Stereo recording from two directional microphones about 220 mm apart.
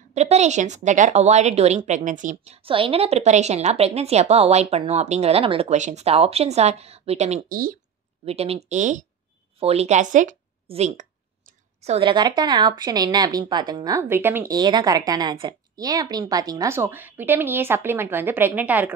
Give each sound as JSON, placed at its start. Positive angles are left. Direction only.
{"t": 0.1, "sound": "a woman's voice", "side_deg": -30}
{"t": 8.3, "sound": "a woman's voice", "side_deg": -25}